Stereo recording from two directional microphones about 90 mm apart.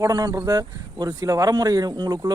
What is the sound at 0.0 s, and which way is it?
Speech, 40° right (ahead or behind).